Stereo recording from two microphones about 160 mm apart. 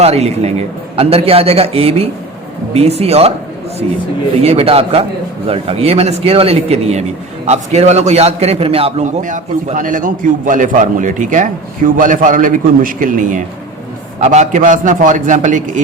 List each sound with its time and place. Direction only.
0.0 s speech: 40° right (ahead or behind)
4.4 s a man's voice: 40° right (ahead or behind)